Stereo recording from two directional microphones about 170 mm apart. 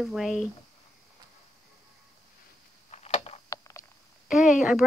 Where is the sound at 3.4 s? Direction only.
20° left (ahead or behind).